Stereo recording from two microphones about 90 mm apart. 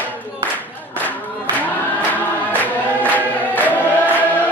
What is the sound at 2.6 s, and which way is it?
Choir, 20° left (ahead or behind).